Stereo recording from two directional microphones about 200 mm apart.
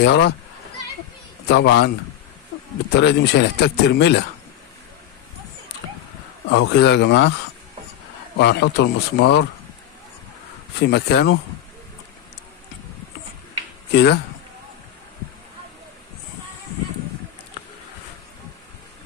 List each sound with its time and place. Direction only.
0.0 s speech: 60° left (ahead or behind)
1.5 s speech: 60° left (ahead or behind)
3.0 s speech: 55° left (ahead or behind)
6.5 s speech: 60° left (ahead or behind)
8.4 s speech: 55° left (ahead or behind)
10.8 s speech: 55° left (ahead or behind)
13.9 s speech: 55° left (ahead or behind)